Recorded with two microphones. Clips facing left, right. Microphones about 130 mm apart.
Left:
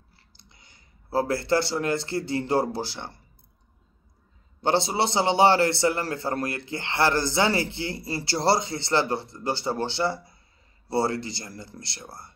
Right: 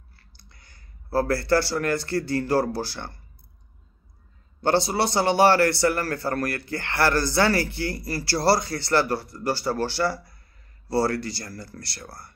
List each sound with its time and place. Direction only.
0.1 s speech: 20° left (ahead or behind)
4.6 s a man's voice: 20° left (ahead or behind)